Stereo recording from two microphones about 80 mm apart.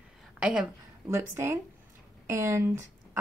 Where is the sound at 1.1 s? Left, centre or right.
Right.